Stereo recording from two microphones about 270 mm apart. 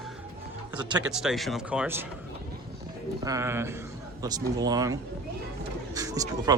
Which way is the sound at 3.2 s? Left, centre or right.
Centre.